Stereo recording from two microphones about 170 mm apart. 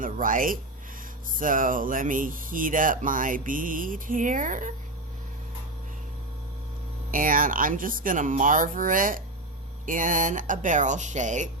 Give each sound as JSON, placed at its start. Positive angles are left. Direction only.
{"t": 0.0, "sound": "speech", "side_deg": -55}
{"t": 7.1, "sound": "speech", "side_deg": -55}